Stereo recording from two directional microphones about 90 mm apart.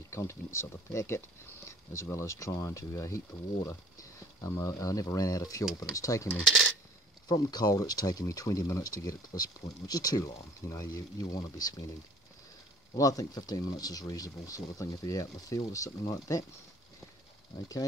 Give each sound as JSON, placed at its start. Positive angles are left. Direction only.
{"t": 0.1, "sound": "speech", "side_deg": 30}
{"t": 1.7, "sound": "a sound", "side_deg": 35}
{"t": 2.1, "sound": "speech", "side_deg": 35}
{"t": 4.4, "sound": "speech", "side_deg": 35}
{"t": 6.4, "sound": "speech", "side_deg": 0}
{"t": 7.2, "sound": "speech", "side_deg": 50}
{"t": 12.9, "sound": "speech", "side_deg": 40}